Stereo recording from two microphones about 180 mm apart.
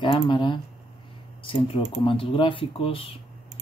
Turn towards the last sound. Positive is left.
turn(degrees=30)  # may be behind; listen again after turning